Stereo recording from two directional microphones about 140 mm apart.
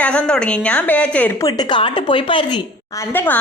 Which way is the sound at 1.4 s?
25° left (ahead or behind).